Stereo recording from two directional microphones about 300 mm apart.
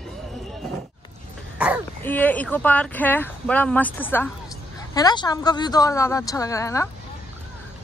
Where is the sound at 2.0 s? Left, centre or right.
Centre.